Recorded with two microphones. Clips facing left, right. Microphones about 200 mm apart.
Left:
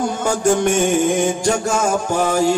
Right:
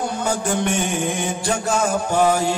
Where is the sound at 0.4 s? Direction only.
40° left (ahead or behind).